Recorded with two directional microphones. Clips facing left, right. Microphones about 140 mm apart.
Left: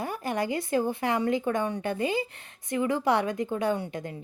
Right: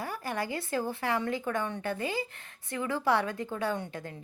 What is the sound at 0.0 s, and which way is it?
A woman's voice, 20° left (ahead or behind).